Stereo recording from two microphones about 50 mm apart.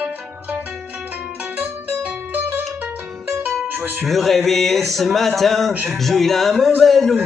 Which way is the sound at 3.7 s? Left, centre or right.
Right.